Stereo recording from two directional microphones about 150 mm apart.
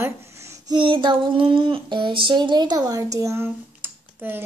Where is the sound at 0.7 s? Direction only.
35° right (ahead or behind).